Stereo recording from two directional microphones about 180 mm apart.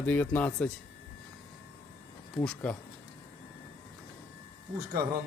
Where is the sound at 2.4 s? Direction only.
10° left (ahead or behind).